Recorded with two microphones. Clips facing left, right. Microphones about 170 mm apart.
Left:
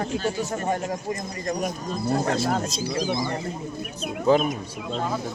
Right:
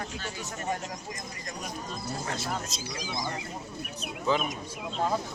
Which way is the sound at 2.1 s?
70° left (ahead or behind).